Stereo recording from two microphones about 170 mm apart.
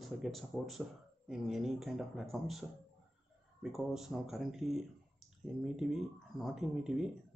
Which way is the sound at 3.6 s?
Centre (ahead or behind).